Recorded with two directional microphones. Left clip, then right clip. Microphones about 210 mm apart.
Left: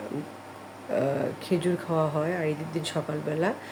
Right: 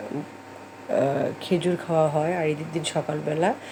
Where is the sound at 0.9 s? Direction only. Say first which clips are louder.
Right 4 dB; 5° right (ahead or behind).